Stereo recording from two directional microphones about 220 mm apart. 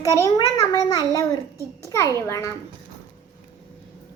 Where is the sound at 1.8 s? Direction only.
15° left (ahead or behind).